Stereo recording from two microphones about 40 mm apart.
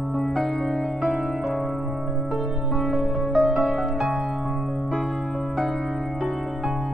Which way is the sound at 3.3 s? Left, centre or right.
Centre.